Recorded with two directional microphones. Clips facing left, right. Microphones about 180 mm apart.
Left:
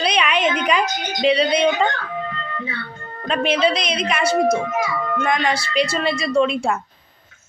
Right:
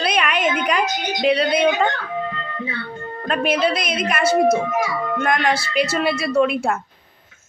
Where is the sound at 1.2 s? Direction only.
Centre (ahead or behind).